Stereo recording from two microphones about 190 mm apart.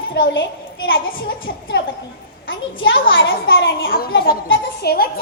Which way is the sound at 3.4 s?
55° left (ahead or behind).